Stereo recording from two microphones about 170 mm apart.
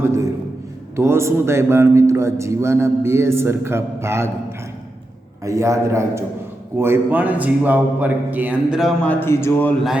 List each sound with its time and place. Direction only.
0.9 s a man's voice: 15° right (ahead or behind)
5.5 s a man's voice: 20° right (ahead or behind); by 9.7 s 15° left (ahead or behind)